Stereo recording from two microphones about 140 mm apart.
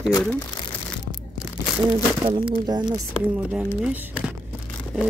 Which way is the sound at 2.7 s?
30° right (ahead or behind).